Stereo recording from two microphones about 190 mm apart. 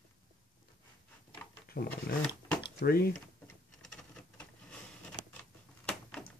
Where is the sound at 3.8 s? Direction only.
5° left (ahead or behind).